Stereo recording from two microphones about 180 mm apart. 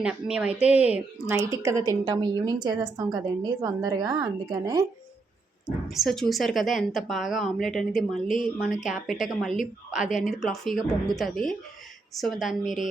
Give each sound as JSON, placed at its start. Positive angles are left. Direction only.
{"t": 0.0, "sound": "a woman's voice", "side_deg": -5}
{"t": 5.9, "sound": "speech", "side_deg": 0}